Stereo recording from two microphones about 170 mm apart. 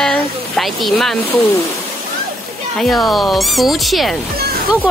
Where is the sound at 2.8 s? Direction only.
Centre (ahead or behind).